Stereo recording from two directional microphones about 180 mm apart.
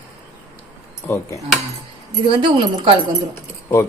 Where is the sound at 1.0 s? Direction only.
15° left (ahead or behind).